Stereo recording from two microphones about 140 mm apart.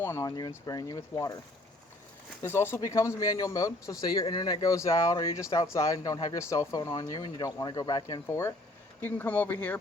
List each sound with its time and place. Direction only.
0.0 s speech: 25° left (ahead or behind)
2.4 s speech: 15° left (ahead or behind)